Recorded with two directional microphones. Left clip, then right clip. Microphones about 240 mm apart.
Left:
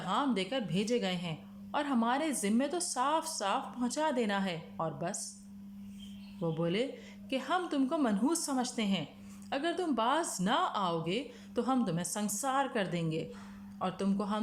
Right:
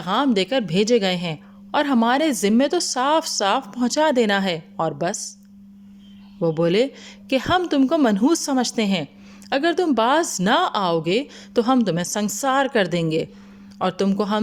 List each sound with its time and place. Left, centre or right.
0.0 s a woman's voice: right
6.4 s a woman's voice: right